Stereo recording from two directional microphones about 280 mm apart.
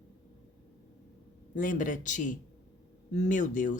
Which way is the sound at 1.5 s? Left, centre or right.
Left.